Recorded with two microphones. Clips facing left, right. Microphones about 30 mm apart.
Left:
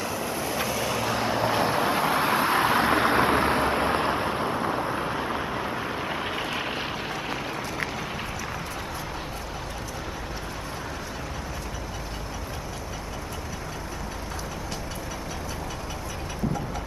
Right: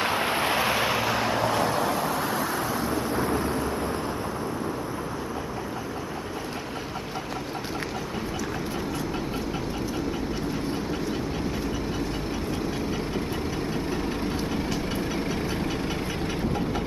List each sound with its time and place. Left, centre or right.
0.0 s vehicle: right
0.6 s vehicle: right
0.9 s vehicle: centre
1.5 s vehicle: centre; by 4.7 s left